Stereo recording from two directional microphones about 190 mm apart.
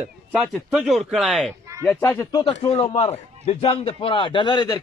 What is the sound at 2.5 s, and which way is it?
A man's voice, 35° left (ahead or behind).